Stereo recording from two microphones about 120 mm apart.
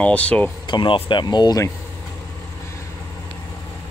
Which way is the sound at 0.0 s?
10° left (ahead or behind).